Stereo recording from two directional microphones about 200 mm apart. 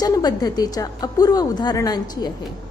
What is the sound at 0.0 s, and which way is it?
A woman's voice, 20° left (ahead or behind).